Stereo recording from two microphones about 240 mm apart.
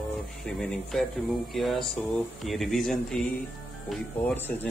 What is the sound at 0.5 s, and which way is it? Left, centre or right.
Speech, centre.